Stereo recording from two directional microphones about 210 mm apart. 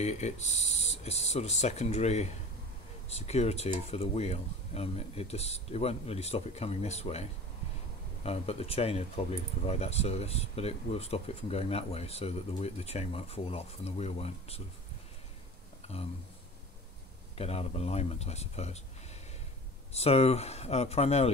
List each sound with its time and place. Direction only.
0.0 s speech: 30° left (ahead or behind)
15.8 s a sound: 30° left (ahead or behind)
17.4 s speech: 30° left (ahead or behind)
19.9 s speech: 30° left (ahead or behind)